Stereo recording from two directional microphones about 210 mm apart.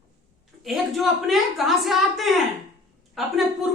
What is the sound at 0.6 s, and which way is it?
A woman's voice, centre (ahead or behind).